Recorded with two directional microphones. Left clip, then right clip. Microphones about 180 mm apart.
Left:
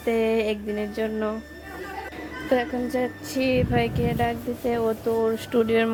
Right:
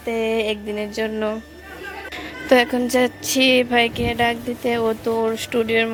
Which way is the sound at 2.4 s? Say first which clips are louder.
Right 8 dB; 15° right (ahead or behind).